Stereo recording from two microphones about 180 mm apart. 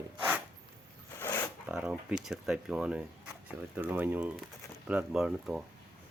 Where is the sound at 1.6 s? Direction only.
5° right (ahead or behind).